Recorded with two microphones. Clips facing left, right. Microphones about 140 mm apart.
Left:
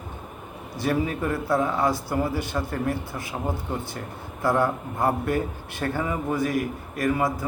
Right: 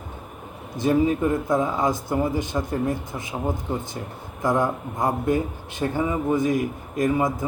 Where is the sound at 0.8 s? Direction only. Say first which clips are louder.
Right 5 dB; 20° right (ahead or behind).